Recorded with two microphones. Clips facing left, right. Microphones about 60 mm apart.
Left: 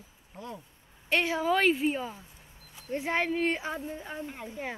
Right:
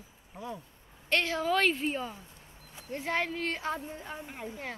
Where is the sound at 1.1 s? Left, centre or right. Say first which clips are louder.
Left 2 dB; centre.